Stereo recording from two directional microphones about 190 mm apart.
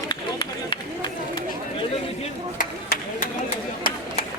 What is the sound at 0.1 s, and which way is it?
Run, 25° left (ahead or behind).